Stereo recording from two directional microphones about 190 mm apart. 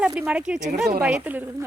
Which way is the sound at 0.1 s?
10° right (ahead or behind).